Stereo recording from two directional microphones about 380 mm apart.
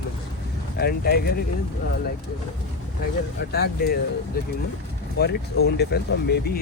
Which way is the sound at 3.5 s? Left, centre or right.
Left.